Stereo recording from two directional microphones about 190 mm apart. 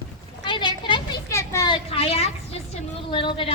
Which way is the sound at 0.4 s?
25° left (ahead or behind).